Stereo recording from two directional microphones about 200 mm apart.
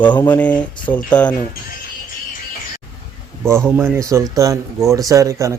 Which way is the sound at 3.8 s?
15° right (ahead or behind).